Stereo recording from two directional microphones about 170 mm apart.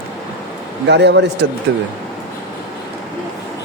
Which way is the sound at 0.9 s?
85° right.